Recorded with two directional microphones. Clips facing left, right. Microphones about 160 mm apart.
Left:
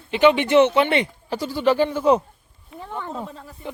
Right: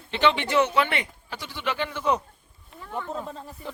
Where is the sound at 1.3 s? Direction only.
35° left (ahead or behind).